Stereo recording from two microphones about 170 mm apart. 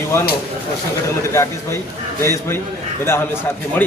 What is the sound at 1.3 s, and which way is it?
Speech, 15° left (ahead or behind).